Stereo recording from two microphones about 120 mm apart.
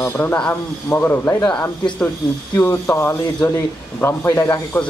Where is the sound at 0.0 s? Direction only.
20° left (ahead or behind).